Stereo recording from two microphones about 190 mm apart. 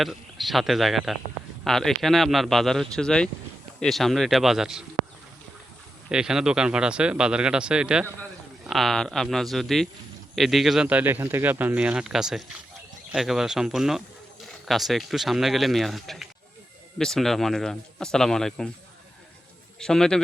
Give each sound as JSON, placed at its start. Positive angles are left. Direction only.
{"t": 0.0, "sound": "speech", "side_deg": 0}
{"t": 6.1, "sound": "speech", "side_deg": -5}
{"t": 19.8, "sound": "speech", "side_deg": 5}